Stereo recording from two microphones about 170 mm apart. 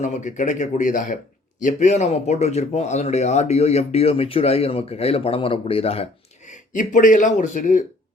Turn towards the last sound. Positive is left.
turn(degrees=45)  # may be behind; listen again after turning